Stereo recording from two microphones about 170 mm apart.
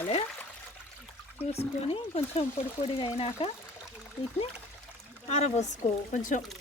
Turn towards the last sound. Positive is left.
turn(degrees=45)  # may be behind; listen again after turning